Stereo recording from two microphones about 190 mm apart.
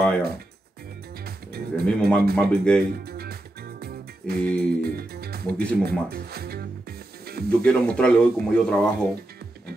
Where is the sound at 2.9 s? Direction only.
55° right (ahead or behind).